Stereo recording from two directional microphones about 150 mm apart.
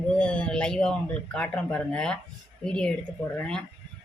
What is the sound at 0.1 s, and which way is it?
Speech, 5° left (ahead or behind).